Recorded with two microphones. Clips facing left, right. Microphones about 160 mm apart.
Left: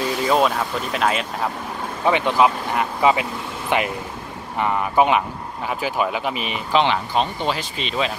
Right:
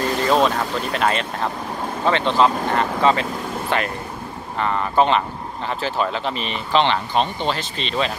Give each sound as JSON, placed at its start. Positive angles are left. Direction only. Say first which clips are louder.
{"t": 0.2, "sound": "speech", "louder": "even", "side_deg": 5}